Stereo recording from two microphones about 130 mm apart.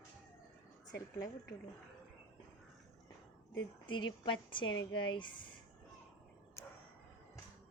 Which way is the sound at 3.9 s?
40° left (ahead or behind).